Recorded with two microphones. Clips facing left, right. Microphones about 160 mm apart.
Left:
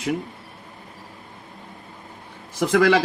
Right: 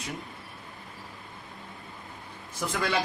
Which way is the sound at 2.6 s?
85° left.